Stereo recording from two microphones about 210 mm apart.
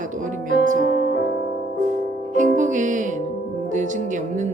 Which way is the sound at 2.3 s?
40° right (ahead or behind).